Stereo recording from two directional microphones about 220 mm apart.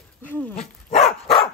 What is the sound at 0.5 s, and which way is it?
Dog, 30° left (ahead or behind).